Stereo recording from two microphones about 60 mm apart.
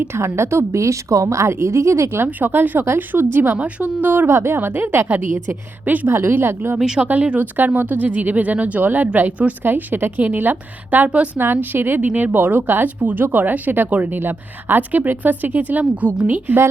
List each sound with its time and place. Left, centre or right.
0.3 s a woman's voice: right
2.0 s a woman's voice: right
4.3 s a woman's voice: right
6.1 s a woman's voice: right
6.7 s speech: centre
7.0 s a woman's voice: right
11.3 s a woman's voice: right